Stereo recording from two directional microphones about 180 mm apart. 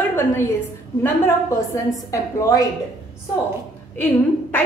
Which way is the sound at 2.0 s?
15° left (ahead or behind).